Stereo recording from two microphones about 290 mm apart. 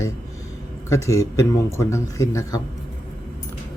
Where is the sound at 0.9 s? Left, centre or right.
Centre.